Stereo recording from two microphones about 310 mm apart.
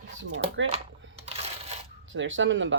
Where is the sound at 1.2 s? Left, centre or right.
Centre.